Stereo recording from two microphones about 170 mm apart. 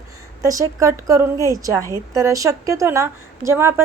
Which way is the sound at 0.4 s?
20° right (ahead or behind).